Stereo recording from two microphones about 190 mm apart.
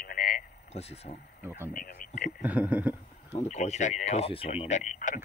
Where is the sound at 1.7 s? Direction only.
45° left (ahead or behind).